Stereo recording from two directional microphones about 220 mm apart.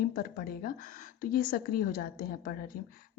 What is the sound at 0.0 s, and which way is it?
A woman's voice, 40° left (ahead or behind).